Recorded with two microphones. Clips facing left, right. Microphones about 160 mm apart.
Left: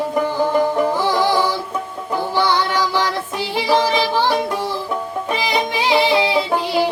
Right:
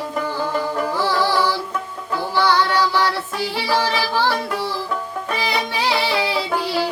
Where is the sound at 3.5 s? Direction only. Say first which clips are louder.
Left 5 dB; 15° left (ahead or behind).